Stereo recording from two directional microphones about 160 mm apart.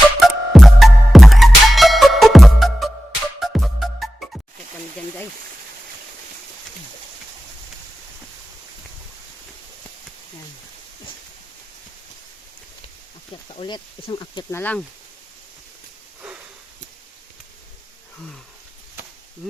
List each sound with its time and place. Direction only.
0.2 s music: centre (ahead or behind)
13.5 s speech: 30° left (ahead or behind)
14.5 s speech: 10° left (ahead or behind)